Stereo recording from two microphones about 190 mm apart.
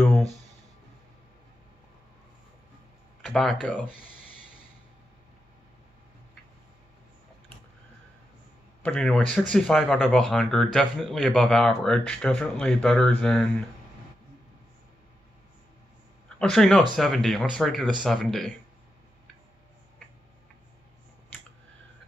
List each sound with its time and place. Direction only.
0.0 s a sound: centre (ahead or behind)
3.2 s speech: centre (ahead or behind)
8.8 s speech: 5° left (ahead or behind)
16.3 s speech: centre (ahead or behind)